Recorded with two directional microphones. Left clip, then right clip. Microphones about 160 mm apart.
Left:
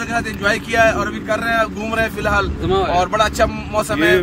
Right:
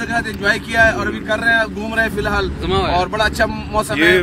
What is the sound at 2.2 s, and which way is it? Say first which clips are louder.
Speech: left 1 dB; 50° left (ahead or behind).